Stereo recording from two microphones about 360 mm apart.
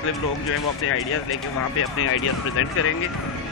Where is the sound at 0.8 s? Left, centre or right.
Left.